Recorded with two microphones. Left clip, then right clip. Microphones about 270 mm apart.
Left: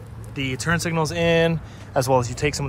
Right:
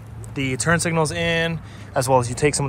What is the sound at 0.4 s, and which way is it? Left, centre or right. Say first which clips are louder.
Speech: right 3 dB; centre.